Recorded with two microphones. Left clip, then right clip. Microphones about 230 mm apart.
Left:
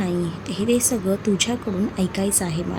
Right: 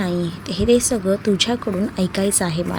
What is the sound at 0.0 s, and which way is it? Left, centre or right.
A woman's voice, right.